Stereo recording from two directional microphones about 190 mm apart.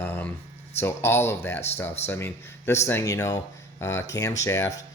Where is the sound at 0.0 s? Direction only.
10° left (ahead or behind).